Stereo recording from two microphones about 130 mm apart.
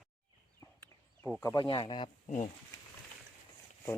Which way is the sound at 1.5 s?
40° left (ahead or behind).